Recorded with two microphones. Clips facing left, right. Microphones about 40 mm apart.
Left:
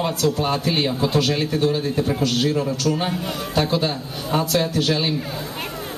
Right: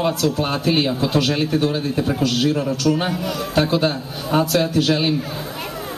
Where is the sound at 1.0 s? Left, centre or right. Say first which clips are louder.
Right 1 dB; right.